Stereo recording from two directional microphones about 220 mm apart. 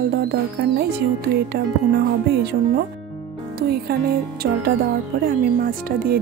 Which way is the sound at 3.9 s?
45° right (ahead or behind).